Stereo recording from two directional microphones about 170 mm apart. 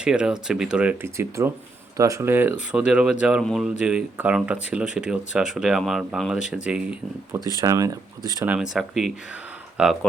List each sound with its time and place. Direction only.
0.0 s speech: 5° right (ahead or behind)
7.3 s speech: 20° right (ahead or behind)
8.4 s speech: 5° right (ahead or behind)